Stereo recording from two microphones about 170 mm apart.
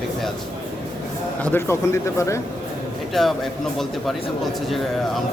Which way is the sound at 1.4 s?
15° left (ahead or behind).